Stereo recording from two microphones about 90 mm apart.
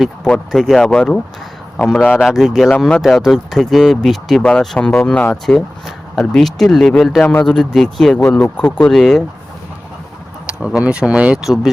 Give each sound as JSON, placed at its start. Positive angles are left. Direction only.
{"t": 0.3, "sound": "speech", "side_deg": 5}
{"t": 2.2, "sound": "speech", "side_deg": -5}
{"t": 7.2, "sound": "a man's voice", "side_deg": 20}
{"t": 7.4, "sound": "speech", "side_deg": 5}
{"t": 10.4, "sound": "speech", "side_deg": -10}
{"t": 11.4, "sound": "speech", "side_deg": 0}